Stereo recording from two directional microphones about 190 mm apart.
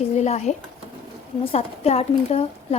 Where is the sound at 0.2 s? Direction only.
35° left (ahead or behind).